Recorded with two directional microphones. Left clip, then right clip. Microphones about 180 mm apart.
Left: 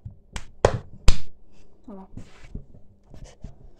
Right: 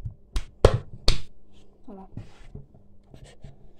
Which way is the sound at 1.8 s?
15° left (ahead or behind).